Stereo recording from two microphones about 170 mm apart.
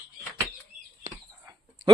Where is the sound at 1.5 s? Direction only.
20° right (ahead or behind).